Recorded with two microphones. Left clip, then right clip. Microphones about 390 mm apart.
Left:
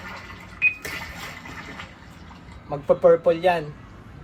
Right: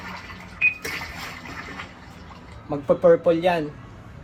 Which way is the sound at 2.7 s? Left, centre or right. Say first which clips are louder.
Even; left.